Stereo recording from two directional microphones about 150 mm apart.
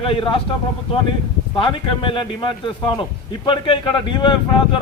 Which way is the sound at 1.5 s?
35° left (ahead or behind).